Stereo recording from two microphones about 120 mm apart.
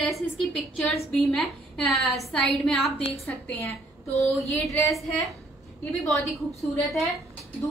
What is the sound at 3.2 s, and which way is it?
A woman's voice, 15° left (ahead or behind).